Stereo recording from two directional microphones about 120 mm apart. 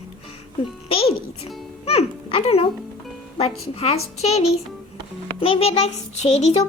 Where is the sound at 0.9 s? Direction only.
55° left (ahead or behind).